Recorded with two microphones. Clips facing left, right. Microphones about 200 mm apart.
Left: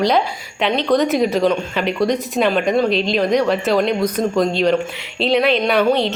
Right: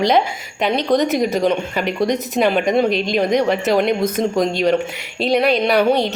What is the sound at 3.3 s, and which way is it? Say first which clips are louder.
A man's voice: even; 20° right (ahead or behind).